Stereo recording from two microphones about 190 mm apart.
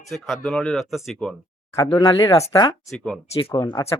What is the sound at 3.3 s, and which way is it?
Speech, 25° left (ahead or behind).